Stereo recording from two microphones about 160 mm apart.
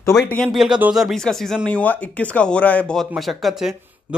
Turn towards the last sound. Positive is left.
turn(degrees=0)  # may be behind; listen again after turning